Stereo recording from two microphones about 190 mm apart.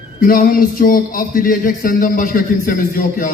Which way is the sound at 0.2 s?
50° left (ahead or behind).